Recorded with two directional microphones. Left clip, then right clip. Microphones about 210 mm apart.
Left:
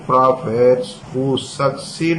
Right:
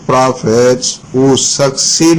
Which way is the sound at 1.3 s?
50° right (ahead or behind).